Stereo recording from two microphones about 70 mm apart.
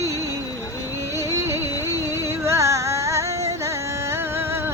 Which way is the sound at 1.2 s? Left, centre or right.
Right.